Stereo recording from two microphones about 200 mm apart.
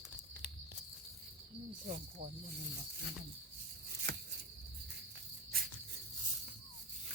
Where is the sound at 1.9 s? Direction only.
45° right (ahead or behind).